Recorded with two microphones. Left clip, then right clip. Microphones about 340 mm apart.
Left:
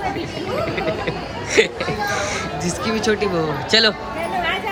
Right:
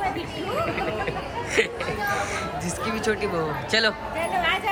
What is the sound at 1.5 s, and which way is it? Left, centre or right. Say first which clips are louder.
Speech: left 7 dB; centre.